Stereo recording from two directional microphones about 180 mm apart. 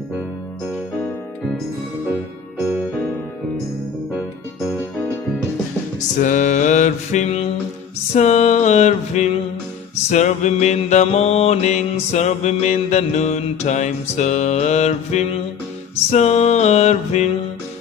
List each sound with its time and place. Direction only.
4.6 s music: 10° left (ahead or behind)
5.9 s music: 45° left (ahead or behind)
8.1 s mantra: 40° left (ahead or behind)